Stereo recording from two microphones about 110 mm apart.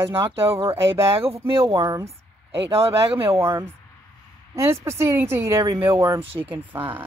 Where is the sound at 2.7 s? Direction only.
60° right (ahead or behind).